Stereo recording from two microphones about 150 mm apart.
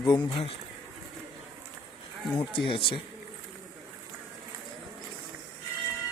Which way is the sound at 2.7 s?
35° left (ahead or behind).